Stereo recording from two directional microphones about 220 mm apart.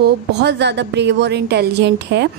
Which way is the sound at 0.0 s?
50° right (ahead or behind).